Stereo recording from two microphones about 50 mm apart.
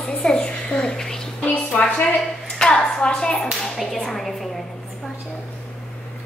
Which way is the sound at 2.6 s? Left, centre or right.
Centre.